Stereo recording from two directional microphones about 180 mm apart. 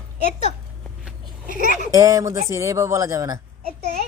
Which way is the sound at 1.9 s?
20° right (ahead or behind).